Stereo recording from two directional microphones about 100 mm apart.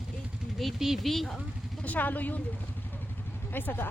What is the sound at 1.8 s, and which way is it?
Speech, 15° left (ahead or behind).